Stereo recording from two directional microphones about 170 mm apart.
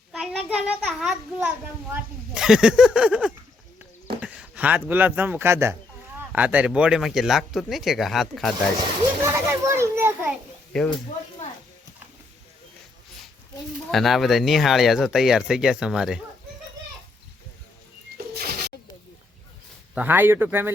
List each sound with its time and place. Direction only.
0.1 s a child's voice: 5° right (ahead or behind)
4.2 s a sound: 5° right (ahead or behind)
4.9 s a child's voice: 10° right (ahead or behind)
9.2 s children playing: 15° right (ahead or behind)
10.7 s speech: 5° left (ahead or behind)
13.9 s a child's voice: centre (ahead or behind)
18.3 s pigeon: 65° right (ahead or behind)
19.9 s speech: 10° right (ahead or behind)